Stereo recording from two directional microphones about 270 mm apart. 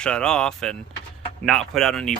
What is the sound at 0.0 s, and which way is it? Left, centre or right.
Speech, centre.